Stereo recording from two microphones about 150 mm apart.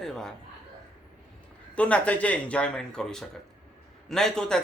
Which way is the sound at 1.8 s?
10° left (ahead or behind).